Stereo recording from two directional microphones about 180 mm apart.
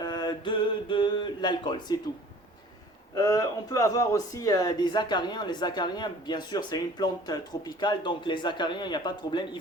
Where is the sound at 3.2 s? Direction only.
20° left (ahead or behind).